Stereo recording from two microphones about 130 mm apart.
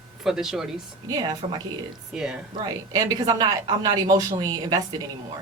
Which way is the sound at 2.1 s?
5° right (ahead or behind).